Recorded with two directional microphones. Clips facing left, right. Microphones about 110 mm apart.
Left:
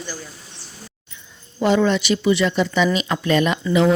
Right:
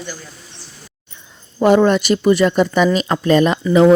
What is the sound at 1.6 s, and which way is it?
Speech, 45° right (ahead or behind).